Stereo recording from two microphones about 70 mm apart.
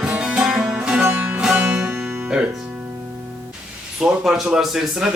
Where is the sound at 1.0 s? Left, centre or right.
Right.